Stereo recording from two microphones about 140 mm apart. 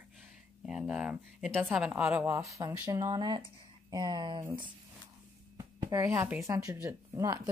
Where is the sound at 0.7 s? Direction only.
5° right (ahead or behind).